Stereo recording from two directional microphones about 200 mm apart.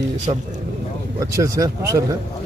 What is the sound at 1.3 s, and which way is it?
Speech, 15° right (ahead or behind).